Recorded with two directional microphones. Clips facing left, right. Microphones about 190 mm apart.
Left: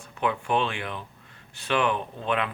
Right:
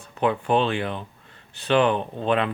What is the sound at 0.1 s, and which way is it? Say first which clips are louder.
Speech: right 4 dB; 35° right (ahead or behind).